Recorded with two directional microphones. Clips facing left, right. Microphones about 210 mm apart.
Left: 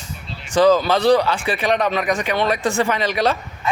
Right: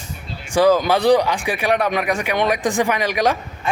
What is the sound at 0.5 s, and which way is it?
Speech, 10° right (ahead or behind).